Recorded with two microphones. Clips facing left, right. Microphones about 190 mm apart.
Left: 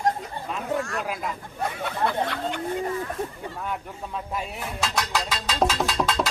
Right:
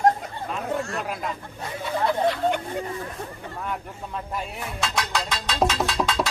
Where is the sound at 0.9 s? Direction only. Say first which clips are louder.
Even; centre (ahead or behind).